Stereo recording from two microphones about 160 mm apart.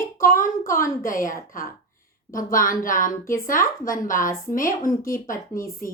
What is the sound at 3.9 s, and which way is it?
Speech, 55° left (ahead or behind).